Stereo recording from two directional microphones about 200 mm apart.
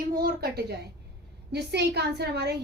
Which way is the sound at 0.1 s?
50° right (ahead or behind).